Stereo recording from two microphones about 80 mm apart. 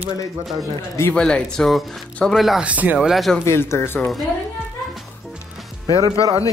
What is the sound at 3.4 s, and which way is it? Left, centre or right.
Speech, left.